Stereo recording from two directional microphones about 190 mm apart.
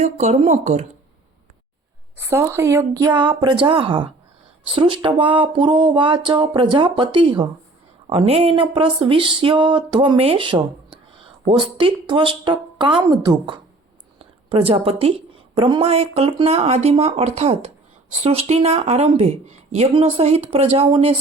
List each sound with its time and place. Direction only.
0.0 s speech: 35° right (ahead or behind)
2.1 s speech: 15° right (ahead or behind); by 21.2 s 30° right (ahead or behind)